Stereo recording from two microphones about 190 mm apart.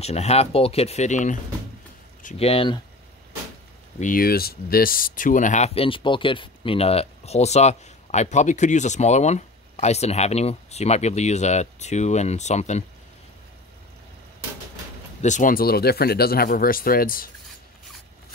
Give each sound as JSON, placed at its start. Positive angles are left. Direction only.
{"t": 0.0, "sound": "speech", "side_deg": 35}
{"t": 4.0, "sound": "speech", "side_deg": 50}
{"t": 15.2, "sound": "speech", "side_deg": 40}